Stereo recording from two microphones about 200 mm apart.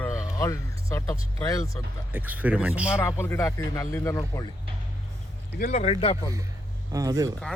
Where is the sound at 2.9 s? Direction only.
15° left (ahead or behind).